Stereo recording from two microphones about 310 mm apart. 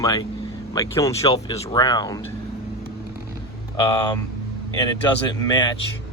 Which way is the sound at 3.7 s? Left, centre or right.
Centre.